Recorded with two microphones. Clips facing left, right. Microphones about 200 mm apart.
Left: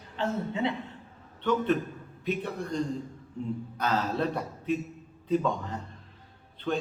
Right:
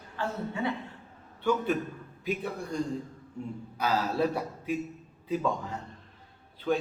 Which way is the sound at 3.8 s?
5° right (ahead or behind).